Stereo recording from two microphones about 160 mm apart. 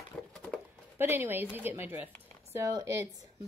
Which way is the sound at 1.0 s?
15° right (ahead or behind).